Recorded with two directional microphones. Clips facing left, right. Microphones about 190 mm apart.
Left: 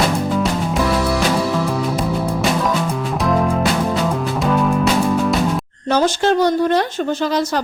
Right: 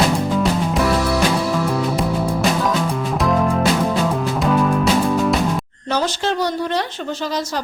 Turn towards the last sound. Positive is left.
turn(degrees=50)  # may be behind; listen again after turning